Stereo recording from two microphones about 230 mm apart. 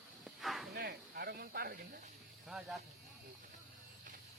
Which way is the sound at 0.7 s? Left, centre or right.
Right.